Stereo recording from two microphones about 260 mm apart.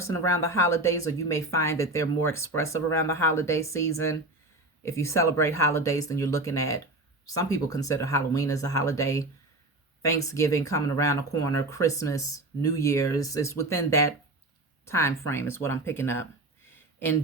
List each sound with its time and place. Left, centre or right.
0.0 s speech: centre